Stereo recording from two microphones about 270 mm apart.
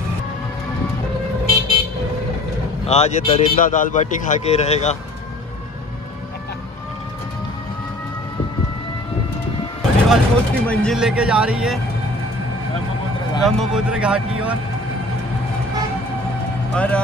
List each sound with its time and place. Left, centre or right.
2.9 s a man's voice: left
10.0 s speech: centre
13.4 s speech: centre
16.7 s speech: centre